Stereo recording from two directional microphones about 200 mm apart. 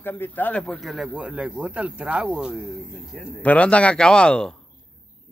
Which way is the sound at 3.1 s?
5° left (ahead or behind).